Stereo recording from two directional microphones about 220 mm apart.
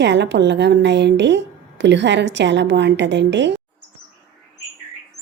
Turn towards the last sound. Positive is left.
turn(degrees=-55)  # may be behind; listen again after turning